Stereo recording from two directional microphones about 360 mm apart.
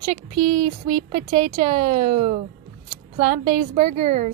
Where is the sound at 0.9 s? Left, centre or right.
Centre.